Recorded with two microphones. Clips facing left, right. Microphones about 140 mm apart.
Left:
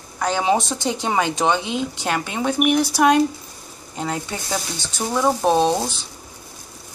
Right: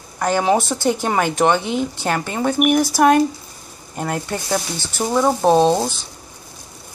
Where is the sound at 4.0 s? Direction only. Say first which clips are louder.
Right 3 dB; 5° right (ahead or behind).